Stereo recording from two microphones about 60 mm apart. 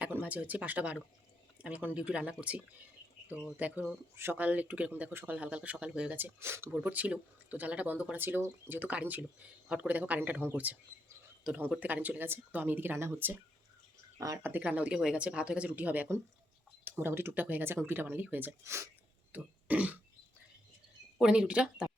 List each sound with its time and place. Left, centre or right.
0.0 s speech: right
6.4 s speech: right
6.8 s speech: right
8.2 s speech: right
8.8 s speech: right
14.2 s speech: right
14.6 s speech: right
17.0 s speech: right
18.6 s speech: right
19.3 s a sound: right
21.2 s speech: centre